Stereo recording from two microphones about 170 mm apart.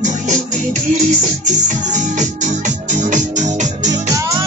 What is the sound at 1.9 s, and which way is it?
Music, 45° right (ahead or behind).